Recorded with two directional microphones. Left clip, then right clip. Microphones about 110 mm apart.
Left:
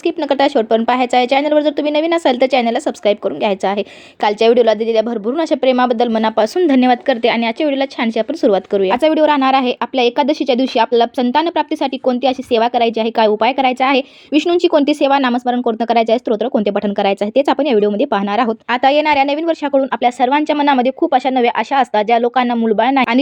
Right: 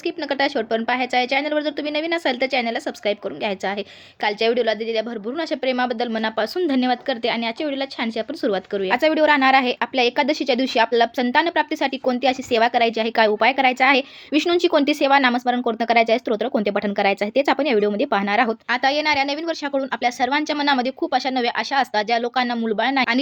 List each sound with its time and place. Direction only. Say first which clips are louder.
0.0 s a woman's voice: left 8 dB; 40° left (ahead or behind)